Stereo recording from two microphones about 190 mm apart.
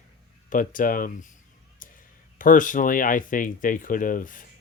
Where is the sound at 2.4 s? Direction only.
45° left (ahead or behind).